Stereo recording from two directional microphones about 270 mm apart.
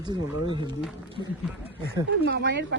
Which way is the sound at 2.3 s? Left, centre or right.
Right.